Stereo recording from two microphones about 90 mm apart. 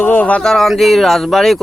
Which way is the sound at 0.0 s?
15° left (ahead or behind).